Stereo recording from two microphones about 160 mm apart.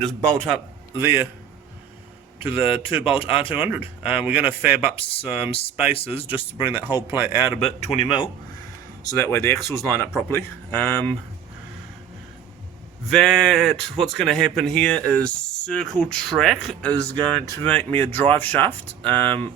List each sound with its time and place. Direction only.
0.0 s speech: 5° left (ahead or behind)
0.9 s speech: 15° right (ahead or behind)
2.4 s a man's voice: 35° left (ahead or behind)
3.5 s speech: 10° right (ahead or behind)
5.9 s a man's voice: 35° left (ahead or behind)
6.6 s speech: 10° right (ahead or behind)
7.5 s a man's voice: 40° left (ahead or behind)
9.0 s speech: 15° left (ahead or behind)
13.1 s speech: centre (ahead or behind)
16.9 s speech: 30° right (ahead or behind)
17.7 s speech: 10° left (ahead or behind)